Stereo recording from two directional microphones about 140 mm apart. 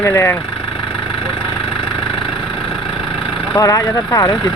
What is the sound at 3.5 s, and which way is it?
Speech, 25° left (ahead or behind).